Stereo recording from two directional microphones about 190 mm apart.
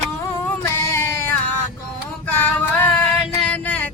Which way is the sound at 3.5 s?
10° left (ahead or behind).